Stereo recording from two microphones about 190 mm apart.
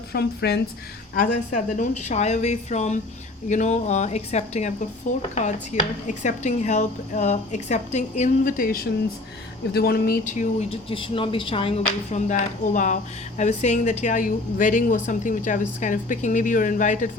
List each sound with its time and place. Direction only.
0.1 s speech: 60° left (ahead or behind)
1.1 s speech: 45° left (ahead or behind); by 11.7 s 25° left (ahead or behind)
12.1 s speech: 40° left (ahead or behind)